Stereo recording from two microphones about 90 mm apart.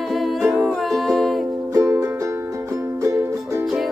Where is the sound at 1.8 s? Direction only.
40° right (ahead or behind).